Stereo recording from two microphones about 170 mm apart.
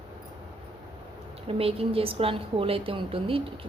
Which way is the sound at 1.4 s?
35° right (ahead or behind).